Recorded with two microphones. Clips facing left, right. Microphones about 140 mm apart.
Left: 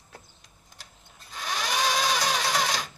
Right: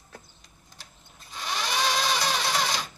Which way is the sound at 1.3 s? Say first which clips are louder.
Even; 5° left (ahead or behind).